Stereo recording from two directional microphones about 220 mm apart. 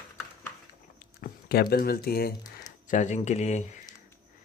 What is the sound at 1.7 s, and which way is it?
Speech, 45° left (ahead or behind).